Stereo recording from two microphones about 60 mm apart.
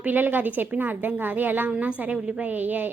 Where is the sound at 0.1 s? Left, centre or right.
Right.